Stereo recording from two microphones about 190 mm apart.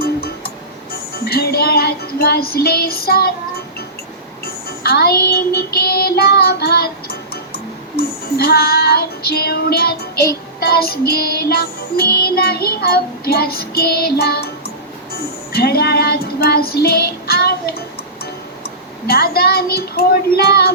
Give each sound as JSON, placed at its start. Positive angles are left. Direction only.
{"t": 0.0, "sound": "music", "side_deg": 55}
{"t": 4.8, "sound": "child singing", "side_deg": 55}
{"t": 10.6, "sound": "music", "side_deg": 55}
{"t": 15.5, "sound": "child singing", "side_deg": 55}
{"t": 18.6, "sound": "a child's voice", "side_deg": 55}